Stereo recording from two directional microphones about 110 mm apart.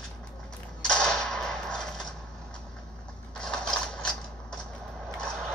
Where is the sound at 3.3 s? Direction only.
5° left (ahead or behind).